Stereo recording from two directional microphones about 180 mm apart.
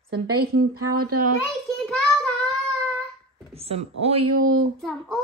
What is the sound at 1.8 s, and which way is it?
Child singing, 5° left (ahead or behind).